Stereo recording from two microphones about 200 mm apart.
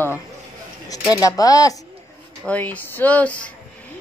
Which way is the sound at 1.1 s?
15° left (ahead or behind).